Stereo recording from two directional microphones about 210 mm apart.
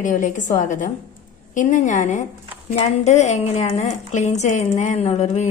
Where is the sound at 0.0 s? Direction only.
40° left (ahead or behind).